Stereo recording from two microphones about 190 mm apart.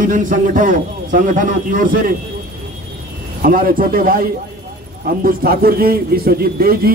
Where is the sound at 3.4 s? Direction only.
50° right (ahead or behind).